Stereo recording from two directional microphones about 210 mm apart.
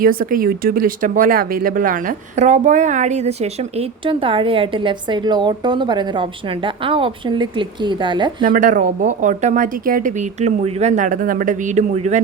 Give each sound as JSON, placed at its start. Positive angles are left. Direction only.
{"t": 0.0, "sound": "speech", "side_deg": -40}
{"t": 8.4, "sound": "speech", "side_deg": -40}